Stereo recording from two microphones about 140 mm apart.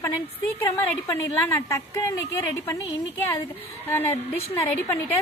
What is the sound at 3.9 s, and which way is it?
A woman's voice, 15° left (ahead or behind).